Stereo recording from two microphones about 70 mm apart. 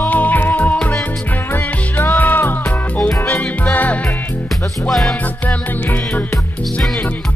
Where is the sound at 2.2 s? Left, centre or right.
Left.